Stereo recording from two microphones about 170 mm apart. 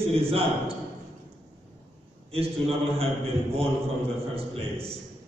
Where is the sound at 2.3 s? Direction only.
35° right (ahead or behind).